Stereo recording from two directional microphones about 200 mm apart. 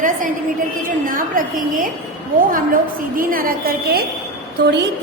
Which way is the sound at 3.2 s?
45° right (ahead or behind).